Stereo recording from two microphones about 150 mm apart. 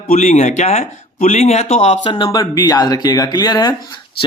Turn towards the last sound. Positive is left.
turn(degrees=25)  # may be behind; listen again after turning